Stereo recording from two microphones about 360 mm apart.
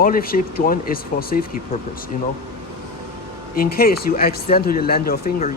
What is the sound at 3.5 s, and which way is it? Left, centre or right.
Speech, left.